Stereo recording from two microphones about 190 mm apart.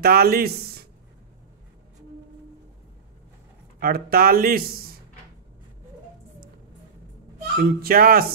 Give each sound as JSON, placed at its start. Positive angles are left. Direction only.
{"t": 0.0, "sound": "speech", "side_deg": -55}
{"t": 3.8, "sound": "speech", "side_deg": -55}
{"t": 7.5, "sound": "speech", "side_deg": -50}